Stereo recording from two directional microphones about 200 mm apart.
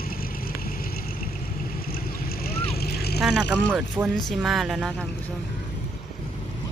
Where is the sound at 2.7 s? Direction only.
50° left (ahead or behind).